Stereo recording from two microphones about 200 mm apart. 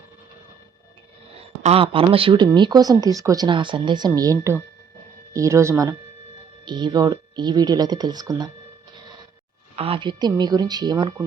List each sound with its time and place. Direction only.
1.6 s speech: 30° right (ahead or behind)
9.7 s speech: 30° right (ahead or behind)